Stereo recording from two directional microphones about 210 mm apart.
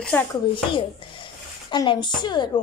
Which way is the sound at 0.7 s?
25° left (ahead or behind).